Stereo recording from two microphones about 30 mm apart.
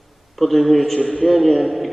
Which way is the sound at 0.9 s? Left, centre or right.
Centre.